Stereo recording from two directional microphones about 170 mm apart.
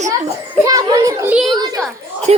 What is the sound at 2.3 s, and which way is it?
Speech, 40° right (ahead or behind).